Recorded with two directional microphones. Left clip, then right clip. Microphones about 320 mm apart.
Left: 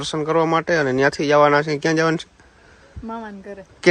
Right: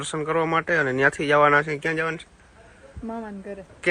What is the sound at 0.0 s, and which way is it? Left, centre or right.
Speech, centre.